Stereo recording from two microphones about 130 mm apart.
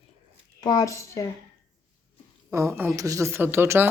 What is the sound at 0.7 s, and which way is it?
Speech, 30° left (ahead or behind).